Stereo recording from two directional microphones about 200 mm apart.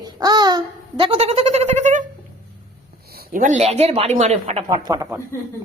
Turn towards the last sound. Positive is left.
turn(degrees=-20)  # may be behind; listen again after turning